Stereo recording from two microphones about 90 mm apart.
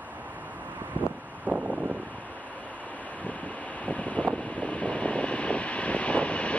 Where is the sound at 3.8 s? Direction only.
15° left (ahead or behind).